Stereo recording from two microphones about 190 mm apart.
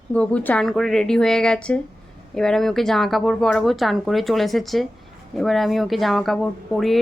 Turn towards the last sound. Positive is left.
turn(degrees=0)  # may be behind; listen again after turning